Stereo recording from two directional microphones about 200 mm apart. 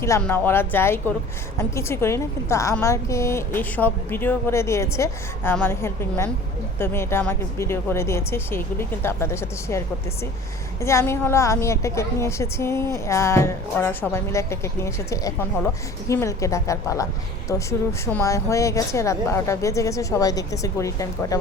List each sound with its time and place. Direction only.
0.2 s a woman's voice: 10° left (ahead or behind)